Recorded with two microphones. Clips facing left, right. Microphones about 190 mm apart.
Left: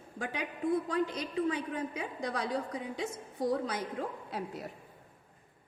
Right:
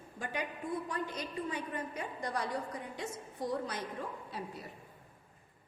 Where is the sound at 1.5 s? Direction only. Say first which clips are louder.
Left 5 dB; 90° left.